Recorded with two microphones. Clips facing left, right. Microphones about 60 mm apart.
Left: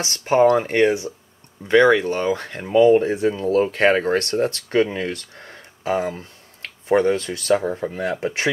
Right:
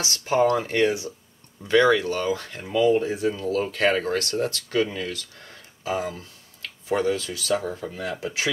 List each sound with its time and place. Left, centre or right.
0.0 s speech: left